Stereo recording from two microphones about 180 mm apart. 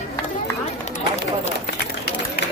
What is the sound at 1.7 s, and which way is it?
Run, 65° left (ahead or behind).